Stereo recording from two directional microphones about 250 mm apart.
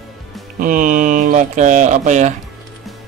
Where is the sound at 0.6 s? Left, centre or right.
Right.